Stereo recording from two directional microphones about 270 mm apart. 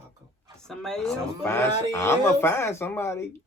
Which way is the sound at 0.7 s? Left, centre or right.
Centre.